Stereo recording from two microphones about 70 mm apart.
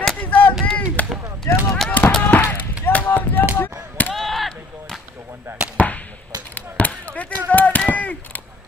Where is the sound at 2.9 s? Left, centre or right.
Left.